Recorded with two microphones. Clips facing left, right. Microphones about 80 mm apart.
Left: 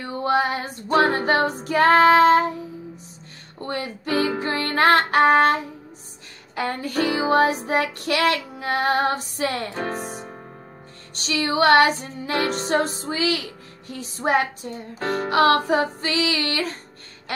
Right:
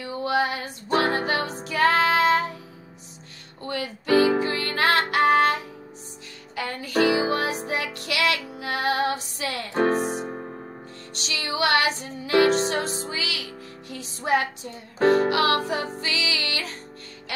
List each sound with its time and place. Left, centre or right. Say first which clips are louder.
0.0 s female singing: left 3 dB; left
0.9 s music: left 4 dB; left
3.5 s music: left 2 dB; left
9.8 s speech: right 6 dB; right
11.1 s music: left 6 dB; left
13.1 s speech: left 7 dB; left
15.0 s speech: right 7 dB; right
15.2 s music: left 4 dB; left